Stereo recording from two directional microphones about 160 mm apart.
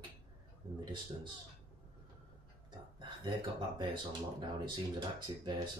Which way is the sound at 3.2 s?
30° right (ahead or behind).